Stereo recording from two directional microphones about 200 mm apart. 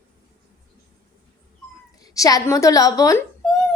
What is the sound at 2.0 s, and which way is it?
A woman's voice, 20° left (ahead or behind).